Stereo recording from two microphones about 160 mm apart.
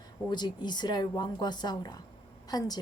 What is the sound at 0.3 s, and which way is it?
Speech, 25° left (ahead or behind).